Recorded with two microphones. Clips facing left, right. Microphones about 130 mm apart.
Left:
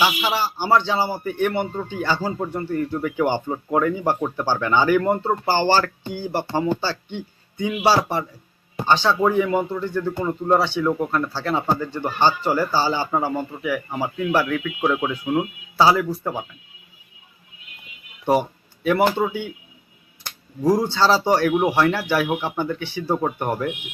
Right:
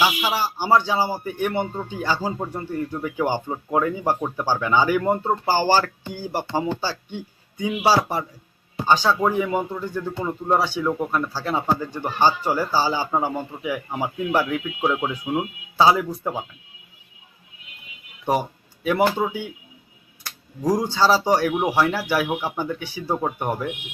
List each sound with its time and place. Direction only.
0.0 s speech: 10° right (ahead or behind)
15.8 s speech: 15° right (ahead or behind)
18.8 s speech: 10° right (ahead or behind)
20.7 s speech: 10° right (ahead or behind)